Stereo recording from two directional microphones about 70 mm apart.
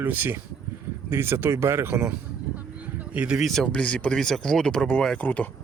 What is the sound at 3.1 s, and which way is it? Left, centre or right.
Speech, centre.